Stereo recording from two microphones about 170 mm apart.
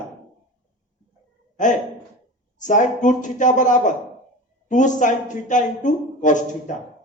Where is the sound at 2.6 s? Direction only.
45° left (ahead or behind).